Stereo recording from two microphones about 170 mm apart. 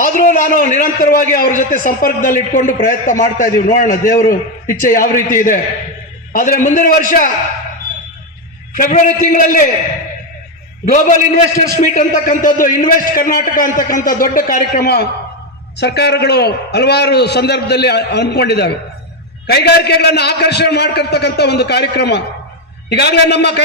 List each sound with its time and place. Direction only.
0.0 s a man's voice: 50° left (ahead or behind)
8.7 s a man's voice: 50° left (ahead or behind)
10.8 s a man's voice: 50° left (ahead or behind); by 15.0 s 65° left (ahead or behind)
15.8 s a man's voice: 80° left